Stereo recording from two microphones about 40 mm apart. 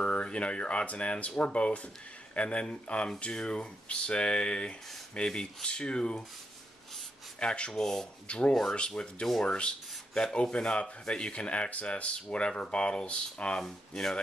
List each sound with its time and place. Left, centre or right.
0.0 s speech: left
7.3 s speech: left
7.7 s speech: centre
8.3 s speech: left
13.7 s speech: centre